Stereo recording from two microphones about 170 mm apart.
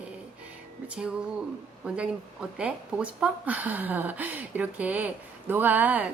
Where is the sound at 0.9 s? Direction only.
5° right (ahead or behind).